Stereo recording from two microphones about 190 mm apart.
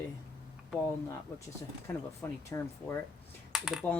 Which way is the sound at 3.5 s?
Centre (ahead or behind).